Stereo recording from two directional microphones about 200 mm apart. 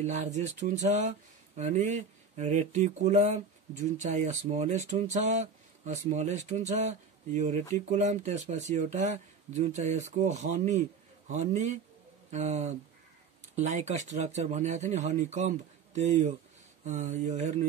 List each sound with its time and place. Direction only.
0.0 s speech: 35° right (ahead or behind)